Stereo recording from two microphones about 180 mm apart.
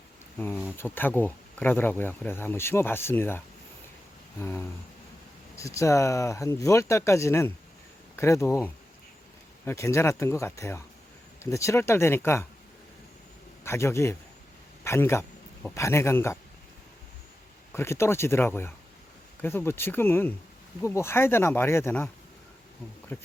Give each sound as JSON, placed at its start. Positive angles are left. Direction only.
{"t": 0.3, "sound": "speech", "side_deg": 10}
{"t": 13.7, "sound": "speech", "side_deg": 15}
{"t": 17.7, "sound": "speech", "side_deg": 15}
{"t": 23.1, "sound": "speech", "side_deg": 10}